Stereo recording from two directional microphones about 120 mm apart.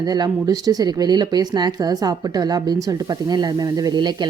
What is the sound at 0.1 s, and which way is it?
A woman's voice, 30° right (ahead or behind).